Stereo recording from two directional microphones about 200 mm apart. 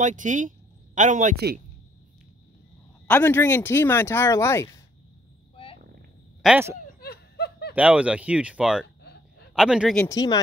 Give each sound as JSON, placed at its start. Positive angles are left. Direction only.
{"t": 0.0, "sound": "speech", "side_deg": -40}
{"t": 3.1, "sound": "speech", "side_deg": 10}
{"t": 6.4, "sound": "speech", "side_deg": -10}
{"t": 6.9, "sound": "snicker", "side_deg": 50}
{"t": 7.7, "sound": "speech", "side_deg": -5}
{"t": 8.8, "sound": "a sound", "side_deg": 60}
{"t": 9.6, "sound": "speech", "side_deg": -5}
{"t": 10.0, "sound": "speech", "side_deg": 20}